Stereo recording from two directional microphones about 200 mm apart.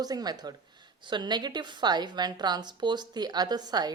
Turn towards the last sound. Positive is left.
turn(degrees=-20)  # may be behind; listen again after turning